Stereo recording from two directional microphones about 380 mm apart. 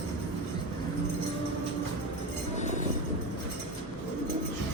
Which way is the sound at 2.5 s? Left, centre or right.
Centre.